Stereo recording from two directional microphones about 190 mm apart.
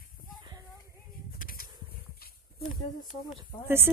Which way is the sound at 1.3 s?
50° left (ahead or behind).